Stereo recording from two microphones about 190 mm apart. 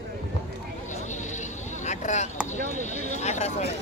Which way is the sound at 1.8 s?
40° left (ahead or behind).